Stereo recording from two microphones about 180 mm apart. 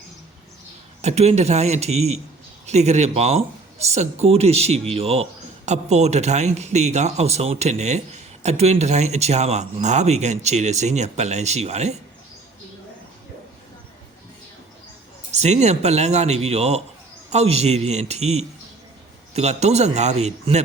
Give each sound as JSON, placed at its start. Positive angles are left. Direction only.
{"t": 1.0, "sound": "speech", "side_deg": -35}
{"t": 15.3, "sound": "speech", "side_deg": -40}